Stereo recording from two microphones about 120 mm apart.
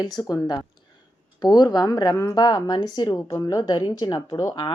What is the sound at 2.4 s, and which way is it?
A woman's voice, 40° left (ahead or behind).